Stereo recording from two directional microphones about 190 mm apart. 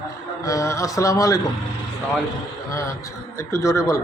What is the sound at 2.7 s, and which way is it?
Speech, 15° left (ahead or behind).